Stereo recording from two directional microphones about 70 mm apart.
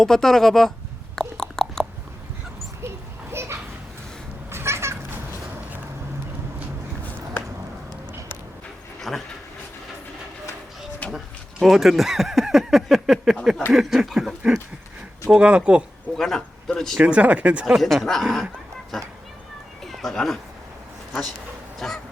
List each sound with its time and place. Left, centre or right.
0.0 s speech: centre
1.1 s a sound: centre
3.3 s children playing: right
4.5 s cat: right
9.0 s a sound: centre
11.0 s a sound: left
11.6 s speech: centre
16.1 s speech: centre
17.0 s speech: centre
17.7 s speech: centre
19.8 s cat: centre
21.1 s speech: centre
21.8 s a sound: centre